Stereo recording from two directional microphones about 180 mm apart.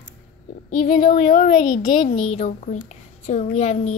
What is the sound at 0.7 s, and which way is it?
Speech, 45° left (ahead or behind).